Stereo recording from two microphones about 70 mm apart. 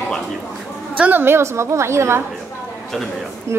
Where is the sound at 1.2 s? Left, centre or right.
Right.